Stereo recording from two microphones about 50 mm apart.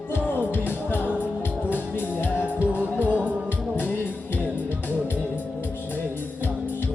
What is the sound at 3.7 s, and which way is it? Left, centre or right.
Music, left.